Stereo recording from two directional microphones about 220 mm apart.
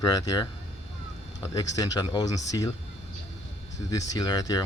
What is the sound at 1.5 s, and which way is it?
Speech, 15° left (ahead or behind).